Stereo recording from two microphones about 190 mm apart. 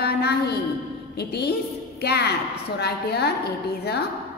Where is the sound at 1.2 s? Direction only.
60° left (ahead or behind).